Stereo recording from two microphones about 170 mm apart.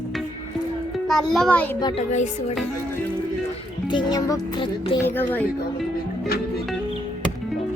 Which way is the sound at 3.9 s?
25° left (ahead or behind).